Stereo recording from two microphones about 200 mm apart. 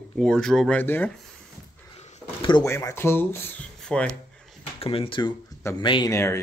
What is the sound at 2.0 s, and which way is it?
Speech, 30° left (ahead or behind).